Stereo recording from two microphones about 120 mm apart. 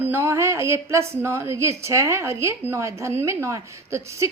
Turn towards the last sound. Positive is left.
turn(degrees=-25)  # may be behind; listen again after turning